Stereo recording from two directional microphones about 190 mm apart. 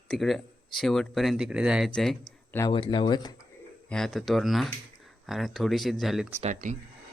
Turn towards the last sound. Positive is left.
turn(degrees=-40)  # may be behind; listen again after turning